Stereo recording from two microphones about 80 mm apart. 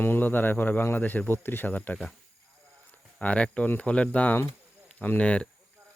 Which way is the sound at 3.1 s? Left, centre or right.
Centre.